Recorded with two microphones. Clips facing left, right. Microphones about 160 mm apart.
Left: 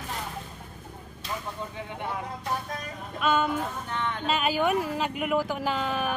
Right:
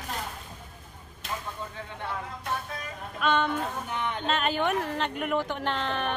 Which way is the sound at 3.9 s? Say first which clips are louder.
Left 1 dB; 15° right (ahead or behind).